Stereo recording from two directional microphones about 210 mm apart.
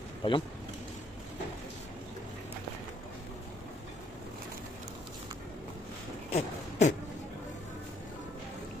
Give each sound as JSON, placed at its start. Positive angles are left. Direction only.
{"t": 0.2, "sound": "speech", "side_deg": 25}
{"t": 6.3, "sound": "beatboxing", "side_deg": 35}